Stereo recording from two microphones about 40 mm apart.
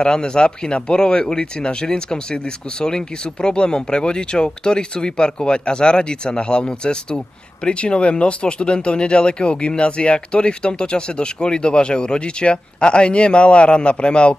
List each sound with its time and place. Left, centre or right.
0.0 s speech: left